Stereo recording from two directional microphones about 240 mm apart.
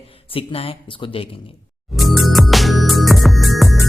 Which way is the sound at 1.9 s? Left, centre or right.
Centre.